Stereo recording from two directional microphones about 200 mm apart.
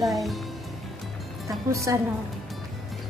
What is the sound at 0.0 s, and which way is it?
Speech, centre (ahead or behind).